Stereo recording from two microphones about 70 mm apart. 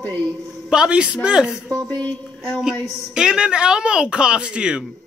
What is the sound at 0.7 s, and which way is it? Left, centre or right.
Speech, centre.